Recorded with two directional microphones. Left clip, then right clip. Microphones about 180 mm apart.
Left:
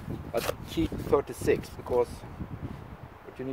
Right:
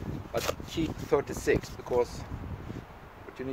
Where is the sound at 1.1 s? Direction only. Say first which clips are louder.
Left 1 dB; 10° left (ahead or behind).